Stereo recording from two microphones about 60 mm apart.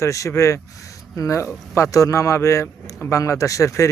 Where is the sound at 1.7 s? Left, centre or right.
Left.